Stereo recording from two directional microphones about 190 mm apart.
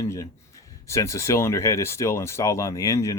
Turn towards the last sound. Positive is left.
turn(degrees=15)  # may be behind; listen again after turning